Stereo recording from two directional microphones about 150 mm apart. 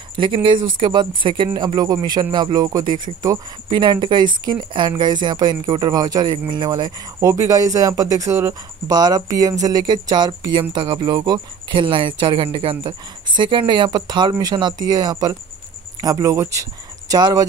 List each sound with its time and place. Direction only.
0.1 s speech: 35° right (ahead or behind)